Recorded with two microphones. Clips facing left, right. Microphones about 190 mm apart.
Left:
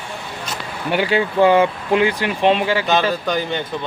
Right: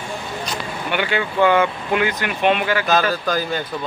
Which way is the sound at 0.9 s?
35° left (ahead or behind).